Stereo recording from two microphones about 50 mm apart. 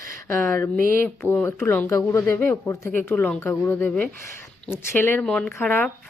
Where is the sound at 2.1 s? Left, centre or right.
Left.